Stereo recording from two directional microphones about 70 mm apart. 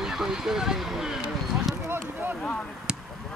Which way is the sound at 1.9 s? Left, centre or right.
Right.